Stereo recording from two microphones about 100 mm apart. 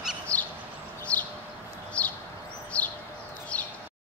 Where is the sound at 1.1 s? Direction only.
30° right (ahead or behind).